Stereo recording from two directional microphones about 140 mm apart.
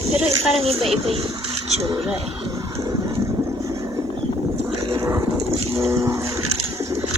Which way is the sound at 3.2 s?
25° right (ahead or behind).